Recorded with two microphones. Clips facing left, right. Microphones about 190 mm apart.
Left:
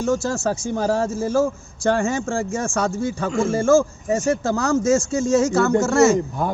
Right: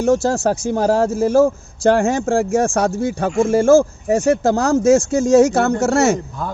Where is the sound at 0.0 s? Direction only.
65° right (ahead or behind).